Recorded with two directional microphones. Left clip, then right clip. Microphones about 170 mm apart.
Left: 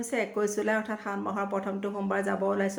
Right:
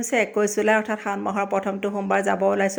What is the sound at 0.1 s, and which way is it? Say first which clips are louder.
A woman's voice: right 8 dB; 30° right (ahead or behind).